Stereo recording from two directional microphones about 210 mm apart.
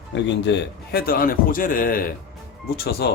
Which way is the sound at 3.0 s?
50° left (ahead or behind).